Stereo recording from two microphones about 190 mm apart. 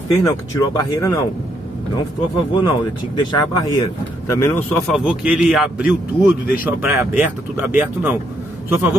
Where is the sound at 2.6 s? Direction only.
20° left (ahead or behind).